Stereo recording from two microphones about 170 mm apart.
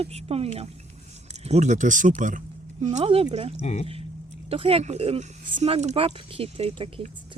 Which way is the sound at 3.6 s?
40° left (ahead or behind).